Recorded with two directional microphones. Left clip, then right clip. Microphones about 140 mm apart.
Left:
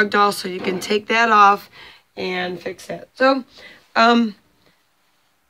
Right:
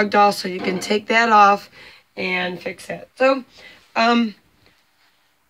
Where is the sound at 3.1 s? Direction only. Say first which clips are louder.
Left 1 dB; 30° left (ahead or behind).